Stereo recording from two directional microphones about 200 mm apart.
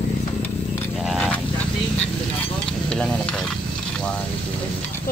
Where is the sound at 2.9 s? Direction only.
5° left (ahead or behind).